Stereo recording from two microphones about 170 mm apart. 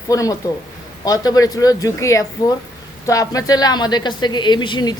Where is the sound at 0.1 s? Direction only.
20° left (ahead or behind).